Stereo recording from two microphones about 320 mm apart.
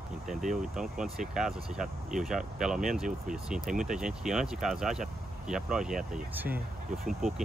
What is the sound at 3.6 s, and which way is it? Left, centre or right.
Speech, right.